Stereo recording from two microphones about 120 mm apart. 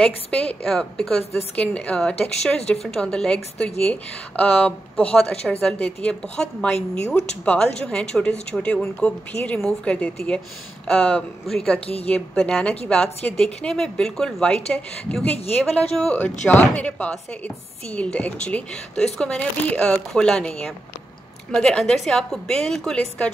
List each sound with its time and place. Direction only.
0.0 s a woman's voice: 10° left (ahead or behind)
11.8 s a woman's voice: 55° left (ahead or behind)
12.1 s a woman's voice: 10° left (ahead or behind)